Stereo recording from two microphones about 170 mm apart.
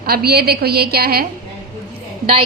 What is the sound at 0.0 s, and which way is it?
A woman's voice, 65° right (ahead or behind).